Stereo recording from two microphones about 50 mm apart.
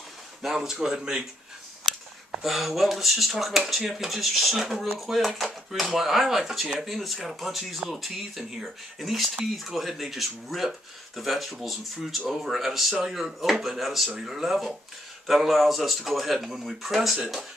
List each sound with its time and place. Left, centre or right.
0.4 s speech: centre
2.4 s speech: centre